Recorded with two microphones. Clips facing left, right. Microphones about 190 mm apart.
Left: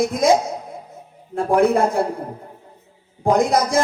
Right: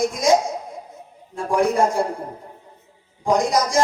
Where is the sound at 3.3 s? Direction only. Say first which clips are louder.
Left 2 dB; 60° left (ahead or behind).